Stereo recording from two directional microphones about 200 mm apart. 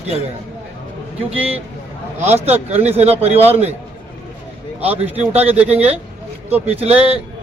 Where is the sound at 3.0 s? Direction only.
30° right (ahead or behind).